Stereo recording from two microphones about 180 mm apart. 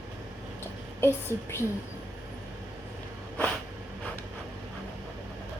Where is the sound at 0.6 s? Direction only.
15° left (ahead or behind).